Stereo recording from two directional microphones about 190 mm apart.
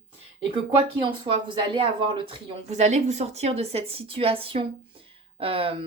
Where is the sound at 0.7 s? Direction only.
25° right (ahead or behind).